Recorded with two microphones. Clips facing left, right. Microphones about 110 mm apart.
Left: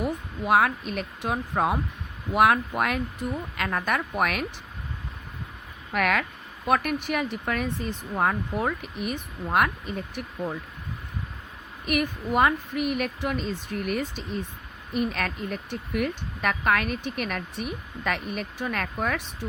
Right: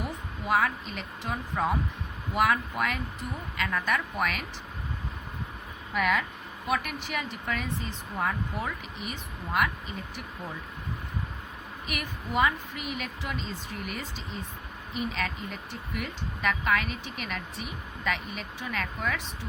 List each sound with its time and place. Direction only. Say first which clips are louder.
0.4 s a woman's voice: left 5 dB; 55° left (ahead or behind)
5.9 s speech: left 2 dB; 65° left (ahead or behind)
6.7 s a woman's voice: left 7 dB; 50° left (ahead or behind)
11.9 s a woman's voice: left 10 dB; 50° left (ahead or behind)